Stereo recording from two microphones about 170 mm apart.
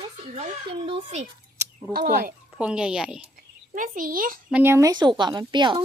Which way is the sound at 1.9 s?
55° right (ahead or behind).